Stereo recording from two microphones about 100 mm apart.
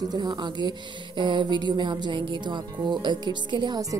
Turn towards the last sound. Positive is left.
turn(degrees=-50)  # may be behind; listen again after turning